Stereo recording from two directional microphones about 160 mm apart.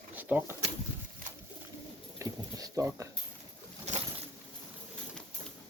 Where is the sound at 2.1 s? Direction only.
20° right (ahead or behind).